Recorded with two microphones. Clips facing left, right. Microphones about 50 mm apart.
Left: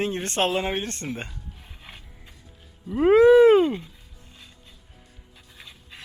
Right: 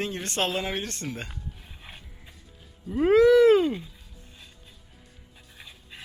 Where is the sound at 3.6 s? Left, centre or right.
Centre.